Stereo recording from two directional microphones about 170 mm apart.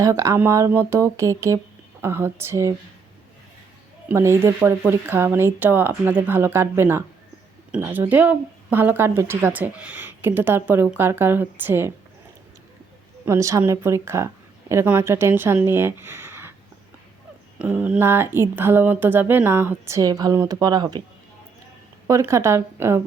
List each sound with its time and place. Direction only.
0.0 s speech: 20° right (ahead or behind)
4.1 s speech: 15° right (ahead or behind)
13.2 s speech: 15° right (ahead or behind)
17.6 s speech: 10° right (ahead or behind); by 21.0 s 25° right (ahead or behind)
22.0 s speech: 15° right (ahead or behind)